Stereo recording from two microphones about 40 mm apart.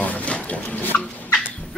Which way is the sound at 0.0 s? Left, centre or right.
Left.